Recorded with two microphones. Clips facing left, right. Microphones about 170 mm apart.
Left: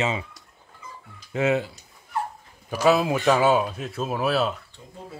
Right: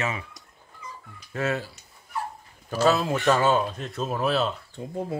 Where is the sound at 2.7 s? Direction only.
10° left (ahead or behind).